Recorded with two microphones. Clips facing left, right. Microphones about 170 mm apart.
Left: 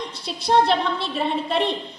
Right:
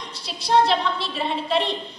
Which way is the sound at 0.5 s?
55° left (ahead or behind).